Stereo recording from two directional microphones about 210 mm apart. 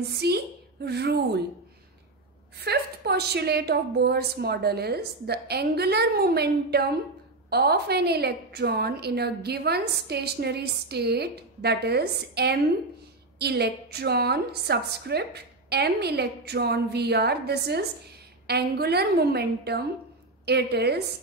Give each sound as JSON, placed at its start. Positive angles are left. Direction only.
{"t": 0.2, "sound": "a woman's voice", "side_deg": -50}
{"t": 2.6, "sound": "a woman's voice", "side_deg": -50}